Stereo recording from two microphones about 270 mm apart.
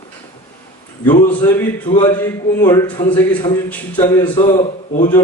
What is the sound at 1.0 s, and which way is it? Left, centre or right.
A man's voice, centre.